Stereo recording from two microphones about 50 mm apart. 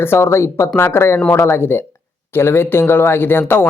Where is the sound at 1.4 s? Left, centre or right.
Left.